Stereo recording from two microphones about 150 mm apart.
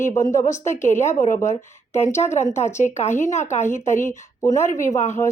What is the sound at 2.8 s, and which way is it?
Speech, 50° left (ahead or behind).